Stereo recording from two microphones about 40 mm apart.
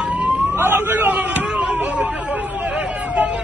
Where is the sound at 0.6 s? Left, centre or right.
Right.